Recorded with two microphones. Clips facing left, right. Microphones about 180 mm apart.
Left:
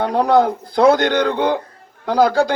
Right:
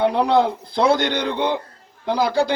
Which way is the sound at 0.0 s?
50° left (ahead or behind).